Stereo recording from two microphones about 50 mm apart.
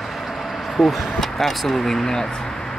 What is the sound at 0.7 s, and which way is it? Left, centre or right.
Speech, centre.